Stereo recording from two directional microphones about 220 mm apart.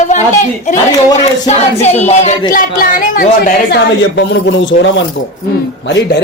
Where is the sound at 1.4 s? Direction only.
30° left (ahead or behind).